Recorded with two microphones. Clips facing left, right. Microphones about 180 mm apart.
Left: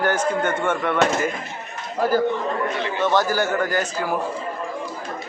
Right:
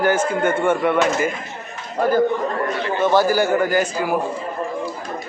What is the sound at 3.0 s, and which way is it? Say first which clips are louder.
A man's voice: right 4 dB; 10° right (ahead or behind).